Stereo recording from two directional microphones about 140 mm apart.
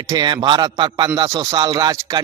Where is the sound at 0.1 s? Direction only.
25° right (ahead or behind).